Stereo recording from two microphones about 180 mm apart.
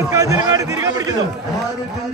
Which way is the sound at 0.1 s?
20° right (ahead or behind).